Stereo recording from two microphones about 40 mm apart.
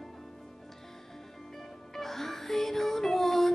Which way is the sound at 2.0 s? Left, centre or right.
Centre.